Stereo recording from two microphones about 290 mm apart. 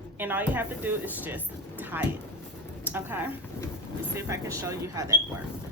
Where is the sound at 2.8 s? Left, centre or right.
Centre.